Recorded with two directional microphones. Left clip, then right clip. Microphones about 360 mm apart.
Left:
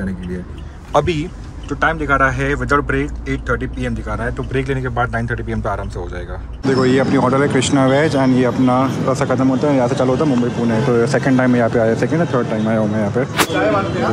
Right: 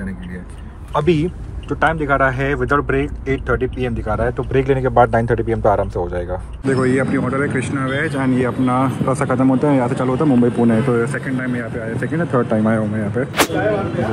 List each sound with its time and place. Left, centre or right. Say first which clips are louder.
1.0 s speech: right 4 dB; centre
11.2 s speech: left 9 dB; left
12.0 s speech: left 2 dB; centre